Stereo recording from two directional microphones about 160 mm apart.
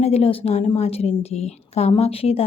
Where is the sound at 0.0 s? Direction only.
40° left (ahead or behind).